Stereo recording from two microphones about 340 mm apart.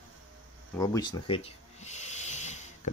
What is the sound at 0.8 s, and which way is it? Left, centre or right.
Snort, centre.